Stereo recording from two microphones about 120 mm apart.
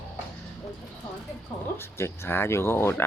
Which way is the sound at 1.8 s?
20° left (ahead or behind).